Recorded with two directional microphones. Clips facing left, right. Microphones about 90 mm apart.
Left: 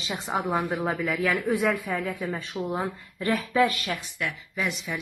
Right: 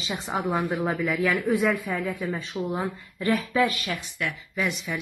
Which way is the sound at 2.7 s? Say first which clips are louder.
Even; 40° left (ahead or behind).